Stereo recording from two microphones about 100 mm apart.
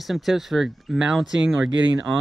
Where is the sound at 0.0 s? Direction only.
Centre (ahead or behind).